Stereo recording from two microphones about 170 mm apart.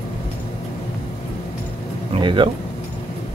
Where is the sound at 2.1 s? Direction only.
30° right (ahead or behind).